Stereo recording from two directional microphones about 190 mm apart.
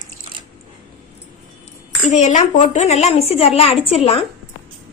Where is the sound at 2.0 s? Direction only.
40° left (ahead or behind).